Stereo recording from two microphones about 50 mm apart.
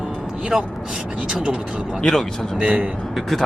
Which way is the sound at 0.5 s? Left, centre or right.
Centre.